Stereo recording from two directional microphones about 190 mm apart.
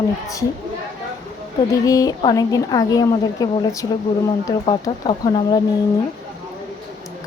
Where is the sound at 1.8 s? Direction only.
20° left (ahead or behind).